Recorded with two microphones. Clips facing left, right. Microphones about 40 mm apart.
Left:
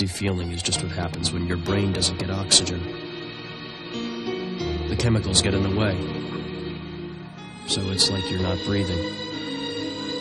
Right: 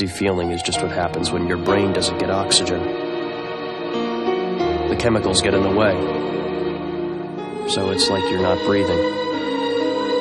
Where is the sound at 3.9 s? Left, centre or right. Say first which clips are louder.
Right 8 dB; right.